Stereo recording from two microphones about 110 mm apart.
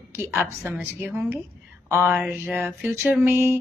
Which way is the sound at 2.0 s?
20° right (ahead or behind).